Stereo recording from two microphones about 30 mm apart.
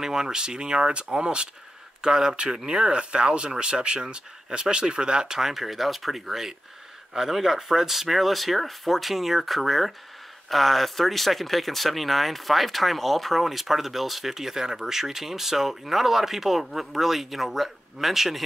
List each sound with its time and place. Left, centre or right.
0.0 s speech: centre
5.3 s speech: centre